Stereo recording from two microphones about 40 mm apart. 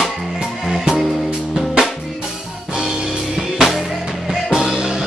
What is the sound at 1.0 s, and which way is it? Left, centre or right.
Music, centre.